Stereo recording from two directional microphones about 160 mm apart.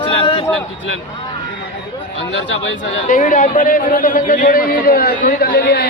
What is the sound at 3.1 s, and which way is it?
A man's voice, 55° left (ahead or behind).